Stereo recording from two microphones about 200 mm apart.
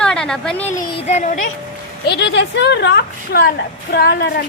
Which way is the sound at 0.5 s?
35° left (ahead or behind).